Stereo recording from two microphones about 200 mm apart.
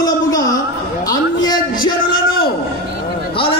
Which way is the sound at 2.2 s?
50° left (ahead or behind).